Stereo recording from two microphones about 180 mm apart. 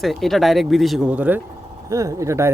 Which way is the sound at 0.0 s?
Centre (ahead or behind).